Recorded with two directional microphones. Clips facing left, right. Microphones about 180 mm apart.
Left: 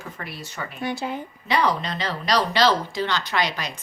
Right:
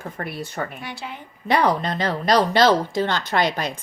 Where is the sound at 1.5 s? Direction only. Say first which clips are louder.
Right 3 dB; 55° right (ahead or behind).